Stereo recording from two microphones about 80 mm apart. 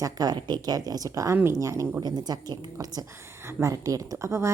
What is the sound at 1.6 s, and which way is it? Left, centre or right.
Speech, right.